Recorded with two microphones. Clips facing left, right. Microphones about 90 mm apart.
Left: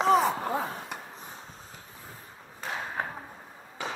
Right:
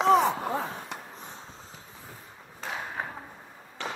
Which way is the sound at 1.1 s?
25° right (ahead or behind).